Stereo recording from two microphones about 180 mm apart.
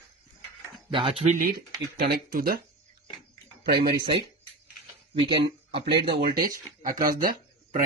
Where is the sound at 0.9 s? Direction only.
30° right (ahead or behind); by 2.6 s 55° right (ahead or behind).